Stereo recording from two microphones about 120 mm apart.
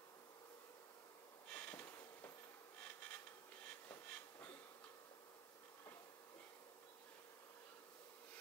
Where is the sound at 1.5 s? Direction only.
10° left (ahead or behind).